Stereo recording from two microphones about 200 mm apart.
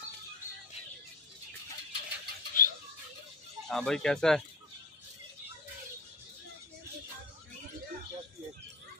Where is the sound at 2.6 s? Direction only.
45° left (ahead or behind).